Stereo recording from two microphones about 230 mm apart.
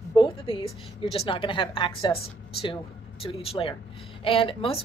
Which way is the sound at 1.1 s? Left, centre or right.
Left.